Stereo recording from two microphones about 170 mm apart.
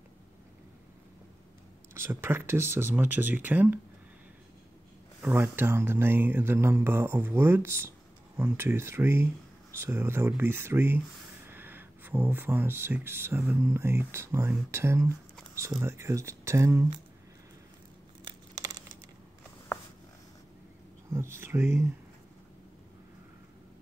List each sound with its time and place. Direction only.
2.0 s speech: 15° right (ahead or behind)
5.2 s speech: 10° right (ahead or behind)
18.2 s crumpling: 20° right (ahead or behind)
21.1 s speech: 15° right (ahead or behind)